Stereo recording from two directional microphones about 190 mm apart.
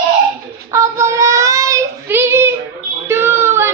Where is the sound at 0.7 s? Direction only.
15° right (ahead or behind).